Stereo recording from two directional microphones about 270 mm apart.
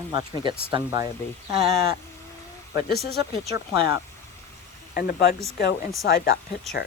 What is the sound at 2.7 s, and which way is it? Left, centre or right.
Speech, left.